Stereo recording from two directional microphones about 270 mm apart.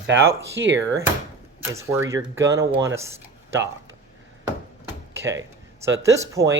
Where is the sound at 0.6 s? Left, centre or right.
Right.